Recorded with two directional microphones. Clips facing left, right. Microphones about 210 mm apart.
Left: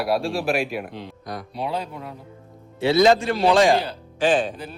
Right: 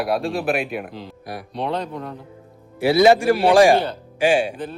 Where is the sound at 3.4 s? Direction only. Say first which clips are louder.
Right 3 dB; 30° right (ahead or behind).